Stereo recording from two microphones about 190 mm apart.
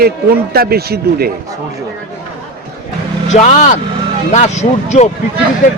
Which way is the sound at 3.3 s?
35° left (ahead or behind).